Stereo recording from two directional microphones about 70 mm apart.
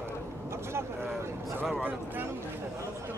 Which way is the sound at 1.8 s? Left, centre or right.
Right.